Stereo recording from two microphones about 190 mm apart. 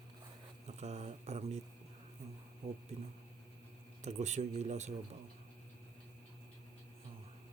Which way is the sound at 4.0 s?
35° right (ahead or behind).